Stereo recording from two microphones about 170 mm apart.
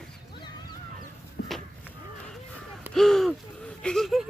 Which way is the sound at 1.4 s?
70° left (ahead or behind).